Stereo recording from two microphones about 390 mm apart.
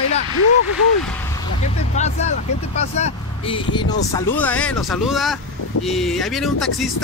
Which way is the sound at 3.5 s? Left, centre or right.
Centre.